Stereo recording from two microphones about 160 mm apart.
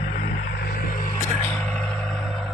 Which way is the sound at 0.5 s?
70° left (ahead or behind).